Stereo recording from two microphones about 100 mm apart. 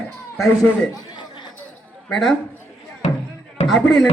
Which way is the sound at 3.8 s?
5° left (ahead or behind).